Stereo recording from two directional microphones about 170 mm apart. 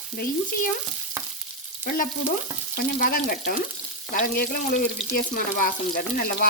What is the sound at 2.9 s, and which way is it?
Speech, 55° left (ahead or behind).